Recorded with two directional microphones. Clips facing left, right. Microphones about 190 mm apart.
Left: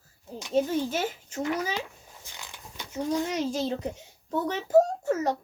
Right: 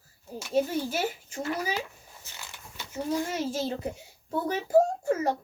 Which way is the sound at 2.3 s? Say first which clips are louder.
Left 1 dB; 15° left (ahead or behind).